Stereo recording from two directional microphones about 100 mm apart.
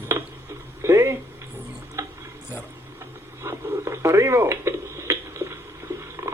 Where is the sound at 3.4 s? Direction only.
30° right (ahead or behind).